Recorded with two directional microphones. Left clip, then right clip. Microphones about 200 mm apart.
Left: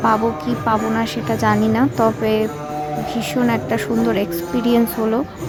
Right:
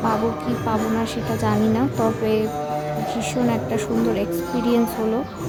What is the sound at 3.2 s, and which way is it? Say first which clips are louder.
A woman's voice: left 5 dB; 15° left (ahead or behind).